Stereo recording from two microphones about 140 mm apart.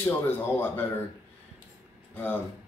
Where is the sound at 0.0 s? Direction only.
15° left (ahead or behind).